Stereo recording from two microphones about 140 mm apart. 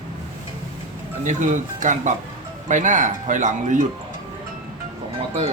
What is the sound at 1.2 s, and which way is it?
Speech, 65° right (ahead or behind).